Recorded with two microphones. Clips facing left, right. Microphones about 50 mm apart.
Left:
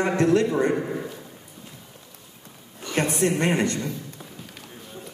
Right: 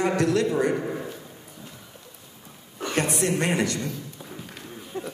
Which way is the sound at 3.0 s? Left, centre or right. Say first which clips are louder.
Left 2 dB; left.